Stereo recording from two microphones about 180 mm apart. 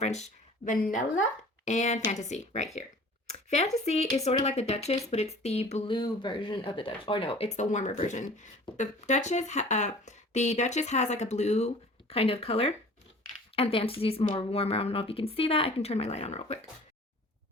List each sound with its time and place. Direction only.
0.0 s speech: 40° left (ahead or behind)
5.9 s speech: 25° left (ahead or behind)